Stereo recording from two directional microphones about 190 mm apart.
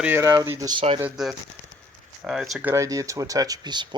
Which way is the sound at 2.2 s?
Centre (ahead or behind).